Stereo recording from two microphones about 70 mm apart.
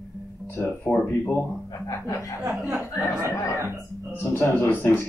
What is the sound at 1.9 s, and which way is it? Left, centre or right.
Speech, left.